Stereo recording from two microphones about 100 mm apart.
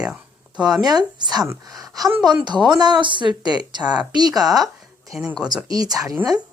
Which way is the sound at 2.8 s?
50° right (ahead or behind).